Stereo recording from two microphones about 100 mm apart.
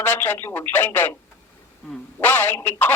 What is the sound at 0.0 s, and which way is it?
Speech, 20° left (ahead or behind).